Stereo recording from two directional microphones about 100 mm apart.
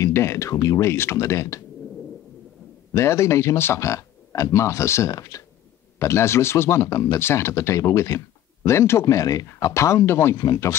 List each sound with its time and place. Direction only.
0.0 s speech: 25° left (ahead or behind)
0.6 s speech: 40° left (ahead or behind)
0.8 s speech: 25° left (ahead or behind)
2.9 s speech: 30° left (ahead or behind)